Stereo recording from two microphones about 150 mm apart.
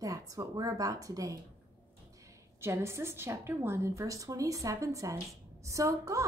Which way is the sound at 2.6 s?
15° right (ahead or behind).